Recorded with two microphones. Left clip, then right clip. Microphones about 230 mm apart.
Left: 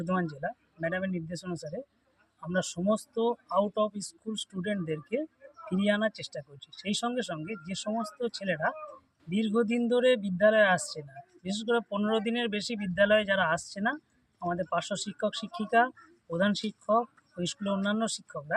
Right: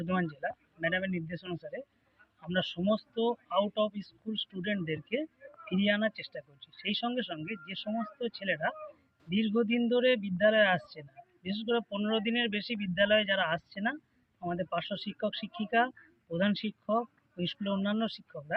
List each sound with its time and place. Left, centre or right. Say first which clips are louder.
0.0 s speech: left 2 dB; centre